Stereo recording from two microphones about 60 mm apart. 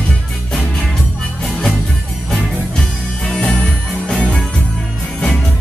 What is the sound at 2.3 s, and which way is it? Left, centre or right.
Music, centre.